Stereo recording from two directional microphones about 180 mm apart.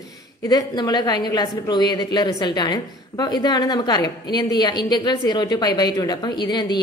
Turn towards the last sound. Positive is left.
turn(degrees=25)  # may be behind; listen again after turning